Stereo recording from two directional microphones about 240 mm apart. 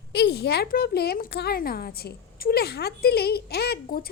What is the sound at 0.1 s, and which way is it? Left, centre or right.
A woman's voice, left.